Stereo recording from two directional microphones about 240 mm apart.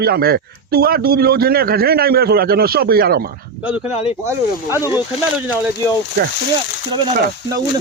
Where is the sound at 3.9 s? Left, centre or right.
Left.